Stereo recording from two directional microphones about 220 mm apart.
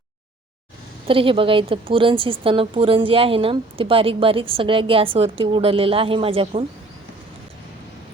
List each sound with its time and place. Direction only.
1.0 s a woman's voice: 25° right (ahead or behind)